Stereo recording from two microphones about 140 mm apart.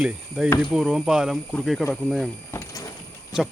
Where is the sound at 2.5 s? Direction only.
20° left (ahead or behind).